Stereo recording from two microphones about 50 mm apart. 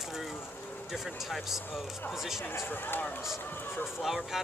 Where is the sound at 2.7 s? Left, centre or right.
Left.